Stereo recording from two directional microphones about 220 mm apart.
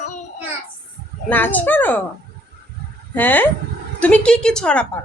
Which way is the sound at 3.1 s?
10° left (ahead or behind).